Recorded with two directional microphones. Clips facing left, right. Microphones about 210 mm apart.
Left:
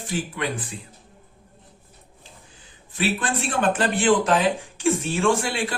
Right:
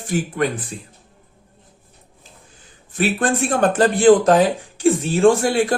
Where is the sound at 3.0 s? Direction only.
45° right (ahead or behind).